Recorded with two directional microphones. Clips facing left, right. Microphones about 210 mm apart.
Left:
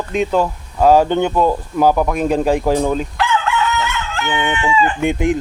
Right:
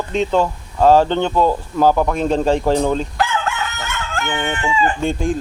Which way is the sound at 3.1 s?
45° right (ahead or behind).